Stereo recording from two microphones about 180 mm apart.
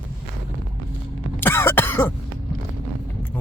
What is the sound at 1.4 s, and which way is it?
Cough, 10° left (ahead or behind).